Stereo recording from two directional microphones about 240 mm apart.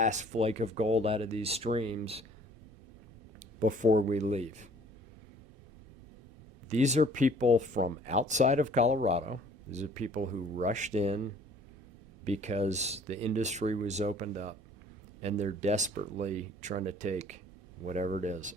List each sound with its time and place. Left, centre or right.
0.0 s speech: right
3.6 s speech: right
6.7 s speech: right
12.2 s speech: right